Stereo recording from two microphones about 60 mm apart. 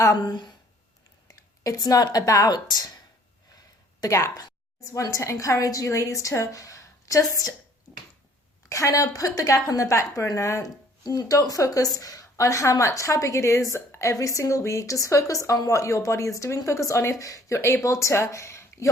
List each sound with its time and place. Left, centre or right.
1.3 s speech: left
4.9 s a woman's voice: left
8.7 s a woman's voice: left
11.1 s a woman's voice: left
14.1 s a woman's voice: left